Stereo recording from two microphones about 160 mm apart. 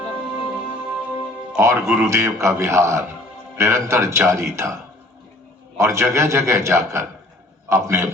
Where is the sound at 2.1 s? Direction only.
20° right (ahead or behind).